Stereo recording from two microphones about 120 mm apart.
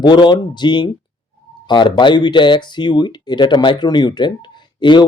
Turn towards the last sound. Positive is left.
turn(degrees=40)  # may be behind; listen again after turning